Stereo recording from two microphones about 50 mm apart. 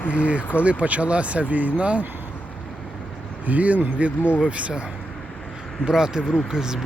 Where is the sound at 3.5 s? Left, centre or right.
Right.